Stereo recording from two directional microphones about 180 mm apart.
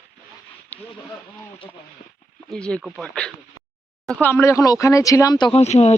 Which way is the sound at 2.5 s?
5° left (ahead or behind).